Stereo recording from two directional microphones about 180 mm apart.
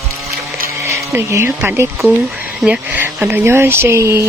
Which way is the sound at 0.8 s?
15° right (ahead or behind).